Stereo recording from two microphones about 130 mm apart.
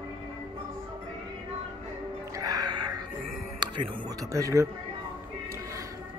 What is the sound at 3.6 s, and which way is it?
Speech, 30° right (ahead or behind).